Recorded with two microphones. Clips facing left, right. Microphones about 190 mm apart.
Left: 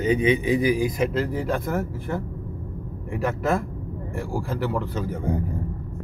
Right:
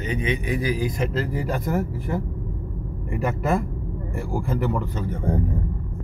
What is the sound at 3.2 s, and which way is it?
Speech, centre (ahead or behind).